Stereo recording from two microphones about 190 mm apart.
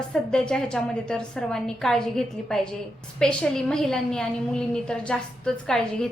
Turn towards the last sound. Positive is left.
turn(degrees=5)  # may be behind; listen again after turning